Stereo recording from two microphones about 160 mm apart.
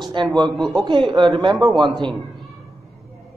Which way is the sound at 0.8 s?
30° right (ahead or behind).